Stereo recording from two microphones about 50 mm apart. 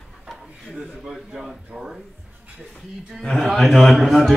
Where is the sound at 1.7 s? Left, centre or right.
Centre.